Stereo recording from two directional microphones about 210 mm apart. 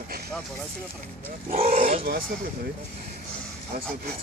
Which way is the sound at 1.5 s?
30° right (ahead or behind).